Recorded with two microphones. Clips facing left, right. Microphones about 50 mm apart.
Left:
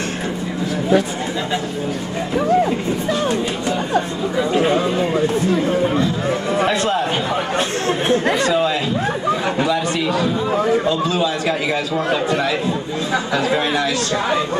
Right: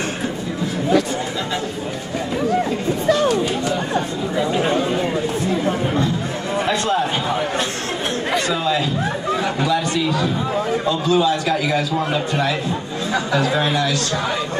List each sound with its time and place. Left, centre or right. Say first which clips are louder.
6.7 s a sound: left 1 dB; left
9.4 s chatter: left 1 dB; centre
11.4 s a man's voice: even; left